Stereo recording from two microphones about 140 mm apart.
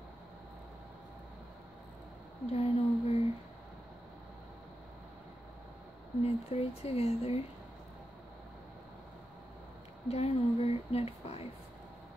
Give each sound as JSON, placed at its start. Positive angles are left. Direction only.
{"t": 2.5, "sound": "a sound", "side_deg": 45}
{"t": 6.2, "sound": "speech", "side_deg": 45}
{"t": 10.0, "sound": "speech", "side_deg": 50}